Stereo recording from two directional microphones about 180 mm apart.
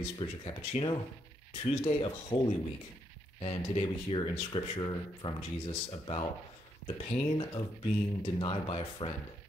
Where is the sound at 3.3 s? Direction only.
30° left (ahead or behind).